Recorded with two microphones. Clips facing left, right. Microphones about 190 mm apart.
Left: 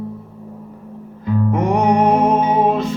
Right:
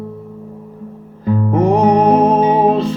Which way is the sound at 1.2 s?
30° right (ahead or behind).